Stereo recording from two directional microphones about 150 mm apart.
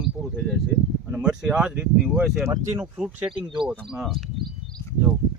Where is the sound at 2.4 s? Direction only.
20° right (ahead or behind).